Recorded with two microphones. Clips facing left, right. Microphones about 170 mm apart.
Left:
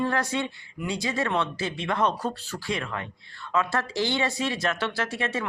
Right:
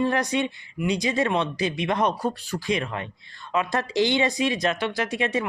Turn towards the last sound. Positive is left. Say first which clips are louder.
# right 4 dB
turn(degrees=-15)  # may be behind; listen again after turning